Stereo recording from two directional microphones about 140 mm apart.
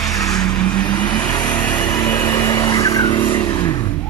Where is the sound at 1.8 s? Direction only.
25° left (ahead or behind).